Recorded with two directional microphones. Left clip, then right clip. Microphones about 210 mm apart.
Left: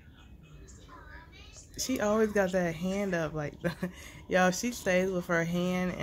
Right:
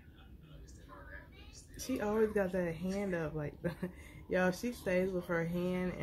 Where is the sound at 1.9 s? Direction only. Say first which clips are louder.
Left 5 dB; 35° left (ahead or behind).